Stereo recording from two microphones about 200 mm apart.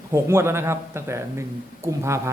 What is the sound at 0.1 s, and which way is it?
Speech, 15° right (ahead or behind).